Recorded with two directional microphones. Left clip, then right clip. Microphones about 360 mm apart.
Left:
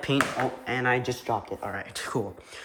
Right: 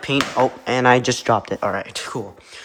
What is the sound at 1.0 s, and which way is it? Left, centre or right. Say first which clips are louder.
Speech: right 11 dB; right.